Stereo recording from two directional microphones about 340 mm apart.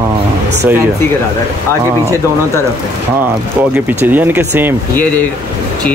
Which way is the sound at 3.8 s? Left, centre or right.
Centre.